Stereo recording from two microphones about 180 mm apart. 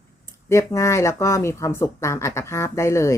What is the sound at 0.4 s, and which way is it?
Speech, 15° left (ahead or behind).